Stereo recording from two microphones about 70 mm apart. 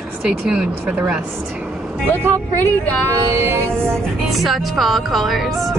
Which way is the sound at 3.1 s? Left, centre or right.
Right.